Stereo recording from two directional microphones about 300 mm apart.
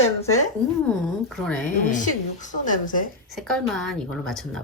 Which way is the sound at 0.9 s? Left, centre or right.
Centre.